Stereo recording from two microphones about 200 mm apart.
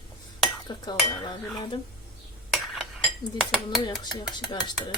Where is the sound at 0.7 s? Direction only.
20° left (ahead or behind).